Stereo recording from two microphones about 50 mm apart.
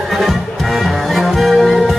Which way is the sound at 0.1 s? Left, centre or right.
Centre.